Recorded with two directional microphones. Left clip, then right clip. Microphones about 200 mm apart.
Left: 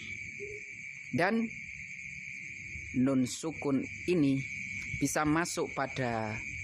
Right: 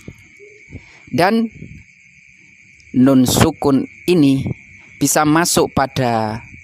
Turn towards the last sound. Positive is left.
turn(degrees=-50)  # may be behind; listen again after turning